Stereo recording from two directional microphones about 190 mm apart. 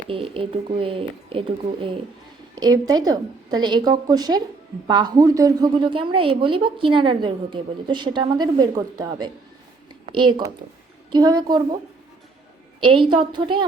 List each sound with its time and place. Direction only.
0.1 s a woman's voice: 30° right (ahead or behind)
12.8 s a woman's voice: 25° right (ahead or behind)